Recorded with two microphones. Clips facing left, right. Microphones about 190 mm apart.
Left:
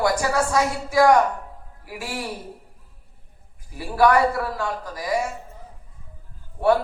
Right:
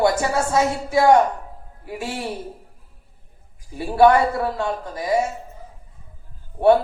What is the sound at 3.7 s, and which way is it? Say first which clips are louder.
A man's voice: right 4 dB; 25° right (ahead or behind).